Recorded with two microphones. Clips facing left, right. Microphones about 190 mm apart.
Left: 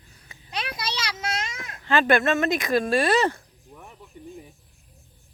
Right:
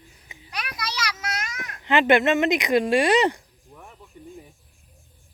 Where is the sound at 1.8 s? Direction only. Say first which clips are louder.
Right 2 dB; 20° right (ahead or behind).